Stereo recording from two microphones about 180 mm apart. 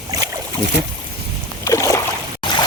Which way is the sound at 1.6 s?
15° left (ahead or behind).